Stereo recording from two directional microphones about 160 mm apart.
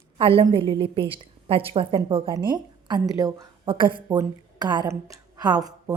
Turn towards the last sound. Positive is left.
turn(degrees=-25)  # may be behind; listen again after turning